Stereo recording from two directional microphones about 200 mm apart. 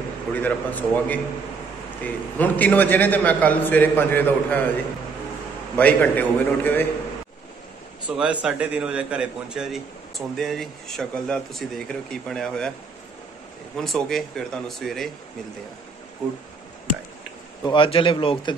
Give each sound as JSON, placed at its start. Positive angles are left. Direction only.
{"t": 0.3, "sound": "a man's voice", "side_deg": 10}
{"t": 5.8, "sound": "a man's voice", "side_deg": 5}
{"t": 8.2, "sound": "a man's voice", "side_deg": -5}
{"t": 13.7, "sound": "a man's voice", "side_deg": 0}
{"t": 17.6, "sound": "speech", "side_deg": 25}